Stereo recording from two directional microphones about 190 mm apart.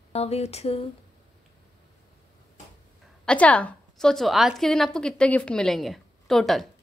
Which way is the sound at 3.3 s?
5° left (ahead or behind).